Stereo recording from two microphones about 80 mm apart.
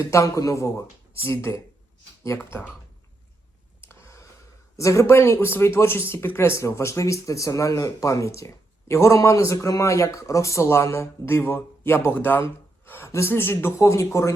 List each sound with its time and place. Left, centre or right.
0.0 s speech: left
3.8 s a sound: left
4.8 s speech: left